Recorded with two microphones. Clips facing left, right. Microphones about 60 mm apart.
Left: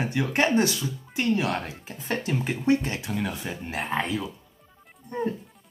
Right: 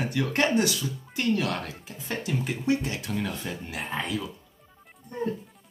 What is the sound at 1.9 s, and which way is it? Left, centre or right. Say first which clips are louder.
Speech: left 3 dB; left.